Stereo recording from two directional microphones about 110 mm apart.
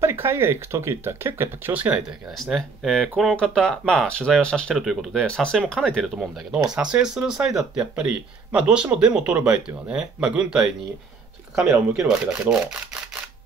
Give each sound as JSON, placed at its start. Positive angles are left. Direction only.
{"t": 0.0, "sound": "speech", "side_deg": -25}
{"t": 2.3, "sound": "speech", "side_deg": 0}
{"t": 6.7, "sound": "speech", "side_deg": -10}
{"t": 11.9, "sound": "speech", "side_deg": -5}